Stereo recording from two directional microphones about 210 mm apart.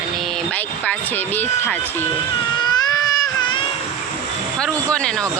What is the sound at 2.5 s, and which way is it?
Baby cry, 20° left (ahead or behind).